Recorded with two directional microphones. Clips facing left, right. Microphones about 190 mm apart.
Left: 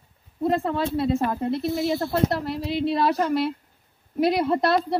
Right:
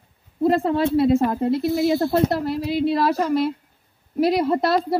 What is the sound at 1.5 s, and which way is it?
Speech, 5° right (ahead or behind).